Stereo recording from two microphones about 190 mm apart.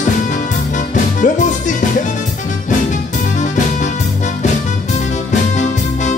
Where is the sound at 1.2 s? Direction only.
40° left (ahead or behind).